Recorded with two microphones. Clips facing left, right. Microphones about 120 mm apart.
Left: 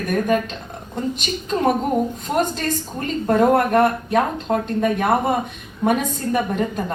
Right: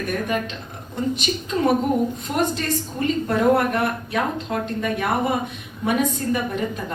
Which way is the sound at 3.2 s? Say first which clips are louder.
Left 4 dB; 45° left (ahead or behind).